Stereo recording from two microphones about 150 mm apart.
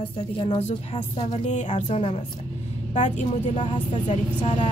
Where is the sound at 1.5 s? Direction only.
55° left (ahead or behind).